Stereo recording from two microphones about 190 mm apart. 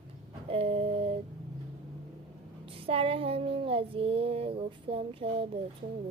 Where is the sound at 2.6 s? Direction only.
30° right (ahead or behind).